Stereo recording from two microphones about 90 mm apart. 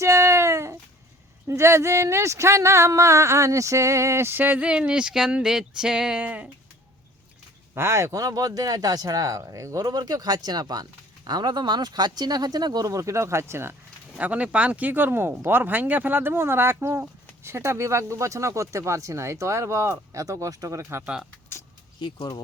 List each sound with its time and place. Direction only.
0.0 s a sound: 35° right (ahead or behind)
1.5 s speech: 30° right (ahead or behind); by 6.5 s 15° right (ahead or behind)
7.7 s speech: 30° right (ahead or behind)
9.8 s speech: 50° right (ahead or behind); by 13.7 s 30° right (ahead or behind)
14.2 s speech: 15° right (ahead or behind); by 21.0 s 35° right (ahead or behind)
21.0 s speech: 10° right (ahead or behind)